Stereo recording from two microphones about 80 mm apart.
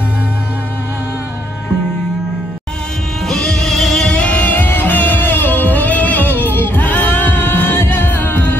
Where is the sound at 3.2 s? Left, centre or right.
Centre.